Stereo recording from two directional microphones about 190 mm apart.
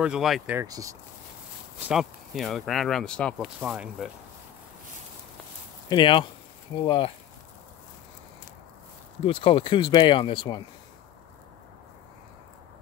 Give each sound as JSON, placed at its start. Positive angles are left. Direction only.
{"t": 0.0, "sound": "speech", "side_deg": -5}
{"t": 0.6, "sound": "speech", "side_deg": -15}
{"t": 1.9, "sound": "speech", "side_deg": 0}
{"t": 3.4, "sound": "speech", "side_deg": -5}
{"t": 5.9, "sound": "speech", "side_deg": 25}
{"t": 9.2, "sound": "speech", "side_deg": 25}